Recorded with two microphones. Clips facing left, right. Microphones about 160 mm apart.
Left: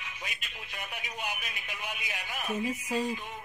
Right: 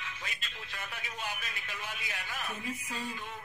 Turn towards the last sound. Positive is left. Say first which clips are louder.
# left 8 dB
turn(degrees=15)  # may be behind; listen again after turning